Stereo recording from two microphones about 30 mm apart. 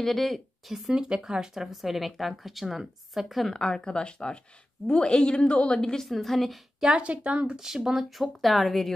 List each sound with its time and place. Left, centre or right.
0.0 s a woman's voice: centre
0.9 s a woman's voice: right; by 3.4 s centre
3.4 s speech: left
6.0 s a woman's voice: centre
6.9 s a woman's voice: right
7.6 s a woman's voice: centre